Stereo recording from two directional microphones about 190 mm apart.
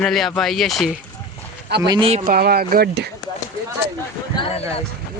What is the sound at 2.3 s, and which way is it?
Speech, 55° right (ahead or behind).